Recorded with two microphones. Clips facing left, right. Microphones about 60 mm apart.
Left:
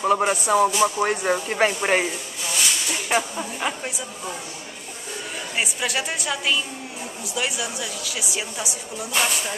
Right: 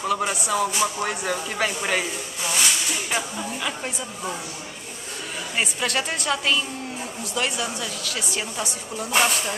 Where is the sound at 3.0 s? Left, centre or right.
Left.